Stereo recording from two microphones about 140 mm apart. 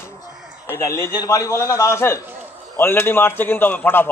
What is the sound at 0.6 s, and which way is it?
A man's voice, 20° left (ahead or behind).